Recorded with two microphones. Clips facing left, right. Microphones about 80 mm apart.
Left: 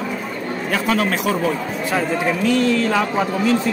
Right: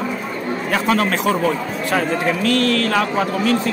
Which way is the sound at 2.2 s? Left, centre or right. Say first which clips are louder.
Even; centre.